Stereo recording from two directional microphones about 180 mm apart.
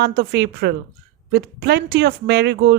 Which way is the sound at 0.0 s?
65° right (ahead or behind).